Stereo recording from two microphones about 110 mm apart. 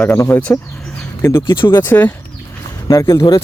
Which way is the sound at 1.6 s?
45° left (ahead or behind).